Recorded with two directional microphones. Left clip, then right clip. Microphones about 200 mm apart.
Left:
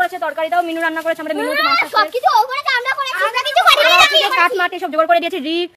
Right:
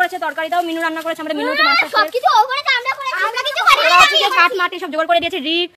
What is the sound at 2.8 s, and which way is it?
Toothbrush, 35° left (ahead or behind).